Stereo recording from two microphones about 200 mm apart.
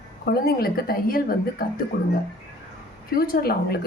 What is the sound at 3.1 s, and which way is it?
Speech, 50° left (ahead or behind).